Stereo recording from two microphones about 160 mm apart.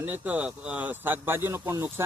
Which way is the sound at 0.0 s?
10° right (ahead or behind).